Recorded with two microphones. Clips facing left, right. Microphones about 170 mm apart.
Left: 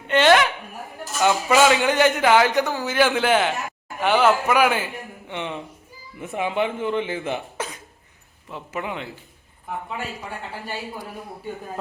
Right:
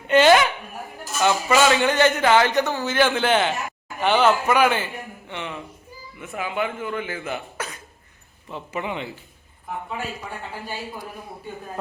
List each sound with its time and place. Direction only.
0.1 s speech: 5° right (ahead or behind)
1.2 s a man's voice: 10° left (ahead or behind)
5.3 s speech: 20° left (ahead or behind)
8.4 s speech: centre (ahead or behind)